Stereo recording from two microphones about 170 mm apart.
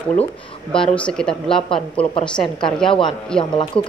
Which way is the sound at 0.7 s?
5° left (ahead or behind).